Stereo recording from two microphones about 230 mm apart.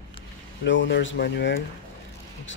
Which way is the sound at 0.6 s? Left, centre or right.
Left.